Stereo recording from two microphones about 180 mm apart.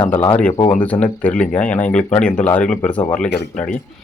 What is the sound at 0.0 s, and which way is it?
Speech, 10° left (ahead or behind).